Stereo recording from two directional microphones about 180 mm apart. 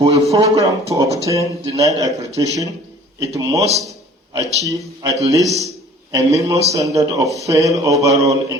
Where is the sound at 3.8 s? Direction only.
20° right (ahead or behind).